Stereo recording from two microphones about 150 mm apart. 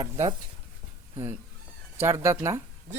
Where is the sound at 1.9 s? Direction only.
15° right (ahead or behind).